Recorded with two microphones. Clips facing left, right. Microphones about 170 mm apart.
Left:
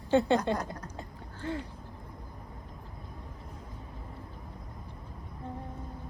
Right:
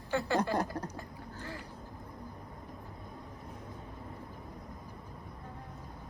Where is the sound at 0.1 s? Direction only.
20° left (ahead or behind).